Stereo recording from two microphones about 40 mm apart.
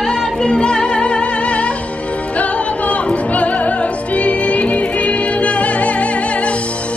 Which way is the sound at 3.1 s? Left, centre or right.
Left.